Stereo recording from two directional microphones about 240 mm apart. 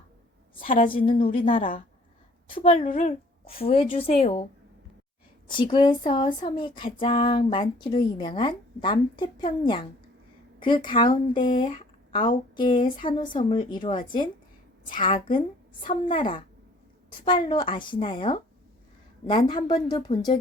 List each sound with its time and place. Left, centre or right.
0.6 s a woman's voice: left
5.5 s speech: centre
10.6 s speech: centre